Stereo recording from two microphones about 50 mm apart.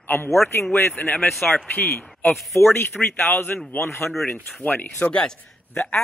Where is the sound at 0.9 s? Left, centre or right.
Left.